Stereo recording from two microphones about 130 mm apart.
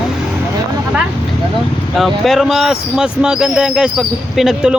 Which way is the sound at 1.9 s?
Centre (ahead or behind).